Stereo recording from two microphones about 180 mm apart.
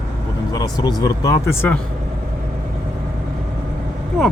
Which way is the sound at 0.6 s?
20° left (ahead or behind).